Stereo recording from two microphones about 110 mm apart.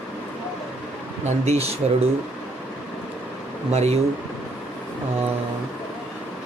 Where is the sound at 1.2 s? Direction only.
80° right.